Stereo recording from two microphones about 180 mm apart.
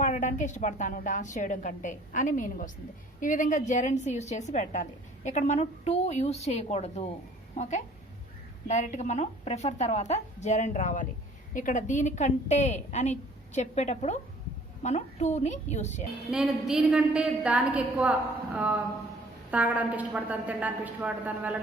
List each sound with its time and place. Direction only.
0.0 s a woman's voice: 45° left (ahead or behind)
16.3 s a woman's voice: 5° right (ahead or behind)